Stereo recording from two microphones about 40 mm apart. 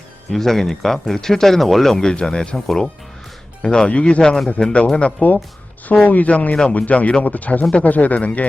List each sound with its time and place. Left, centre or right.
0.3 s speech: centre
2.0 s speech: centre
2.6 s speech: centre
3.6 s speech: left
4.2 s speech: centre
4.9 s speech: left